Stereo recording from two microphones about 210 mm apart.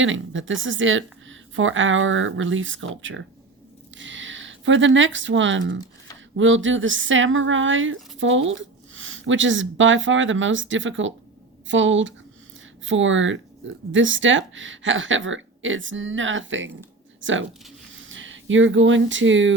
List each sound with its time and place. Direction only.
0.0 s speech: 65° right (ahead or behind)